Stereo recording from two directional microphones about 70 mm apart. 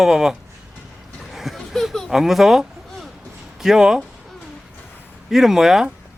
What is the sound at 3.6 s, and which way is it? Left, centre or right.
Speech, centre.